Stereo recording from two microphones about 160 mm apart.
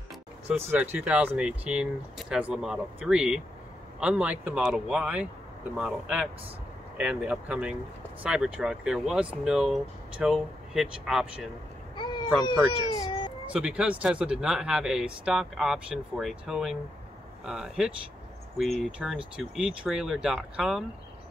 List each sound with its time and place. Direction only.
0.6 s speech: 10° right (ahead or behind)
11.9 s a sound: 30° left (ahead or behind)
12.4 s speech: 25° left (ahead or behind)
13.5 s speech: 5° right (ahead or behind)